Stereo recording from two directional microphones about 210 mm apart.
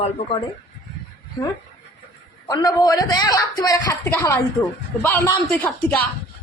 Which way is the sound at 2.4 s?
20° left (ahead or behind).